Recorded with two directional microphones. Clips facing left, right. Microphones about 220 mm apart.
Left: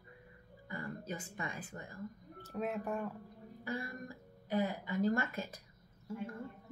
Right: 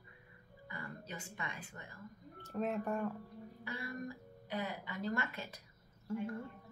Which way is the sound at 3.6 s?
45° left (ahead or behind).